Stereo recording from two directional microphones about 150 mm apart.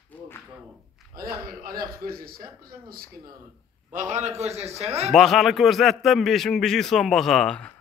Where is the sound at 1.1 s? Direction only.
80° right.